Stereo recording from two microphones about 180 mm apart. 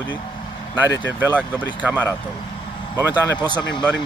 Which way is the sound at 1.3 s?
10° right (ahead or behind).